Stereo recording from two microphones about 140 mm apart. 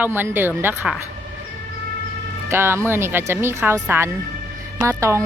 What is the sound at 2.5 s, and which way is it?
A woman's voice, 20° right (ahead or behind).